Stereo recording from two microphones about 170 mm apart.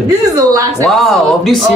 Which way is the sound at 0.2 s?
20° right (ahead or behind).